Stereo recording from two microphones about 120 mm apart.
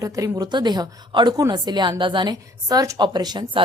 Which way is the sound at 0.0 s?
30° right (ahead or behind).